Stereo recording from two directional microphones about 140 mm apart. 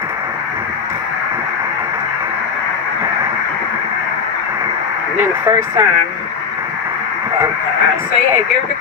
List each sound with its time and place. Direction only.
5.2 s speech: 20° right (ahead or behind)